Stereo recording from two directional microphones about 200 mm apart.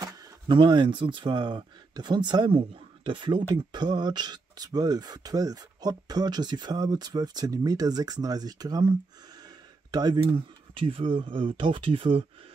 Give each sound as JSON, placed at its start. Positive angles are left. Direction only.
{"t": 0.0, "sound": "speech", "side_deg": -20}